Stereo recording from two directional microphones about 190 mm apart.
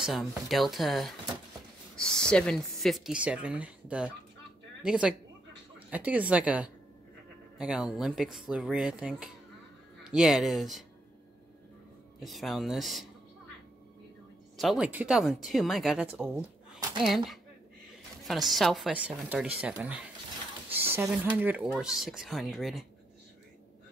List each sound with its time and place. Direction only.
0.0 s a woman's voice: centre (ahead or behind)
12.2 s speech: centre (ahead or behind)
14.6 s speech: 5° right (ahead or behind)
18.5 s speech: centre (ahead or behind)